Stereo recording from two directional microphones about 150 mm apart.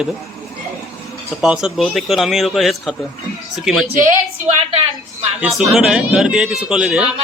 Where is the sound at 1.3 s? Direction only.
5° right (ahead or behind).